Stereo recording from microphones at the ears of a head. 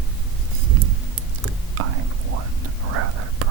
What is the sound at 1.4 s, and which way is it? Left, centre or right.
Whispering, right.